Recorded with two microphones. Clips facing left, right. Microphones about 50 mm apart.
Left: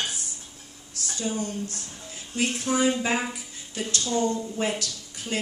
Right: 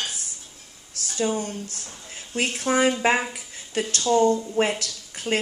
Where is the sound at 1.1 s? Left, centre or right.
Right.